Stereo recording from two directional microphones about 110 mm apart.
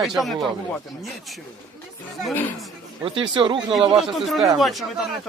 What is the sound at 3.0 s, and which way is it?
Speech, 45° right (ahead or behind).